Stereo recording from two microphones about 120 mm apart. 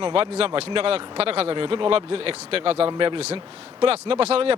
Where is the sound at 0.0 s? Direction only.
50° right (ahead or behind).